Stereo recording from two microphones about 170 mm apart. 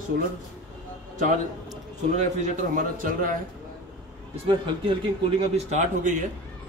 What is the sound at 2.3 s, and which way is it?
A man's voice, 45° right (ahead or behind).